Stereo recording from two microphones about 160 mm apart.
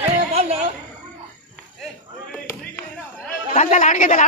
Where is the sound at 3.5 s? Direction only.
50° left (ahead or behind).